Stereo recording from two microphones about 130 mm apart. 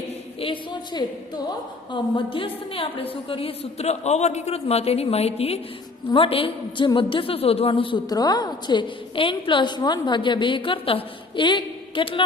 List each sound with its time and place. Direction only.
0.3 s a woman's voice: 40° left (ahead or behind)
8.1 s a woman's voice: 30° left (ahead or behind)